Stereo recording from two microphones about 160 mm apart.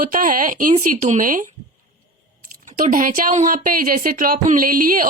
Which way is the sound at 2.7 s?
55° right (ahead or behind).